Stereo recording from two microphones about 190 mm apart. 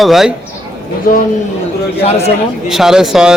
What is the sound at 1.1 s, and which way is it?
Speech, 45° left (ahead or behind).